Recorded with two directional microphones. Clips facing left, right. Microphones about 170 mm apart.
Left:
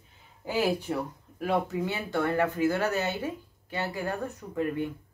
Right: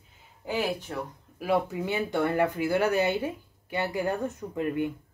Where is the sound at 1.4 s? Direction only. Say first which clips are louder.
Right 1 dB; 15° right (ahead or behind).